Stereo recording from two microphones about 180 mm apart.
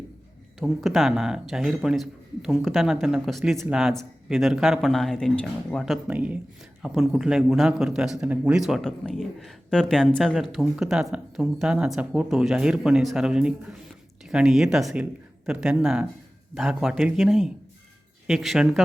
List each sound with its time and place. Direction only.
0.6 s a man's voice: centre (ahead or behind)